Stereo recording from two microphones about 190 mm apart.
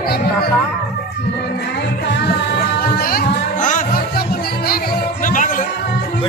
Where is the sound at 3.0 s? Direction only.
50° left (ahead or behind).